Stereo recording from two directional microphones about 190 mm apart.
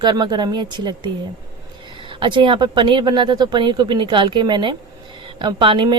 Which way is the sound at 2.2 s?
25° right (ahead or behind).